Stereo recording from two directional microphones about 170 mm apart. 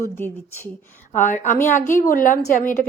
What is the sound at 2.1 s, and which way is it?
Speech, 55° left (ahead or behind).